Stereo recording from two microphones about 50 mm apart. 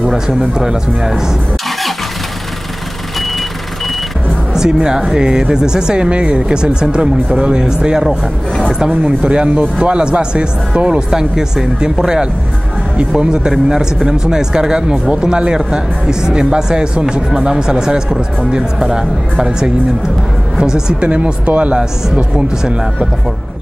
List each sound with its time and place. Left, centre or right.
0.1 s speech: centre
4.6 s speech: centre
9.0 s speech: centre
21.0 s speech: right